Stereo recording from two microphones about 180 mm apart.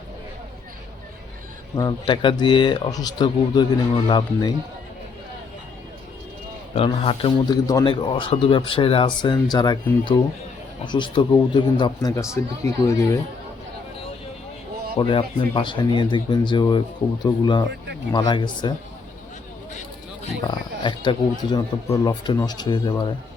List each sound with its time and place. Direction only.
1.7 s a man's voice: 25° left (ahead or behind)
6.7 s a man's voice: 30° left (ahead or behind)
14.9 s a man's voice: 30° left (ahead or behind)
20.5 s a man's voice: 25° left (ahead or behind)